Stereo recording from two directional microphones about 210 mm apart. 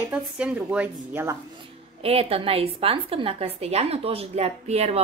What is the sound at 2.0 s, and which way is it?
A woman's voice, 30° right (ahead or behind).